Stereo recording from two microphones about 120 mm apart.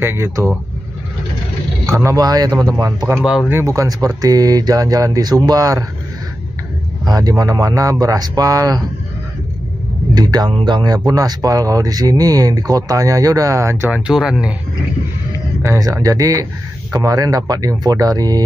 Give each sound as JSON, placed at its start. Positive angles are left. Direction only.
{"t": 0.0, "sound": "speech", "side_deg": -20}
{"t": 1.9, "sound": "speech", "side_deg": -25}
{"t": 3.2, "sound": "speech", "side_deg": -5}
{"t": 3.4, "sound": "speech", "side_deg": -20}
{"t": 7.1, "sound": "speech", "side_deg": -30}
{"t": 10.1, "sound": "speech", "side_deg": -35}
{"t": 15.6, "sound": "speech", "side_deg": -25}